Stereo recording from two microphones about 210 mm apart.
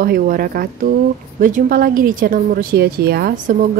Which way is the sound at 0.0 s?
45° right (ahead or behind).